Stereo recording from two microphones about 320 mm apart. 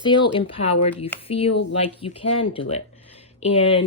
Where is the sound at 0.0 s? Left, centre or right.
Centre.